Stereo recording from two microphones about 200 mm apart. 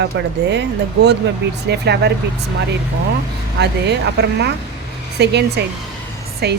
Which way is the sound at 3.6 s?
55° right (ahead or behind).